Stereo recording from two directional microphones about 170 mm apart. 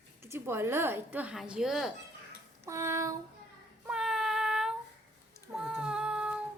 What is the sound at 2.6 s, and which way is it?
Speech, 15° right (ahead or behind).